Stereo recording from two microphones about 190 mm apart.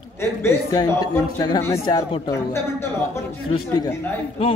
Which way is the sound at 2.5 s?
15° left (ahead or behind).